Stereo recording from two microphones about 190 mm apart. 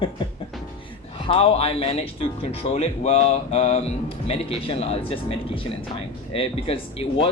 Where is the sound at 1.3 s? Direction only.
30° left (ahead or behind).